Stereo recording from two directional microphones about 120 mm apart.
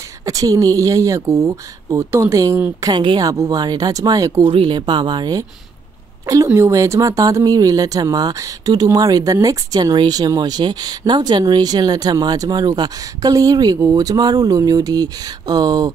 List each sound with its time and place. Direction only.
0.2 s speech: 30° right (ahead or behind)
3.0 s a woman's voice: 45° right (ahead or behind)
3.3 s a woman's voice: 30° right (ahead or behind)
6.2 s a woman's voice: 25° right (ahead or behind)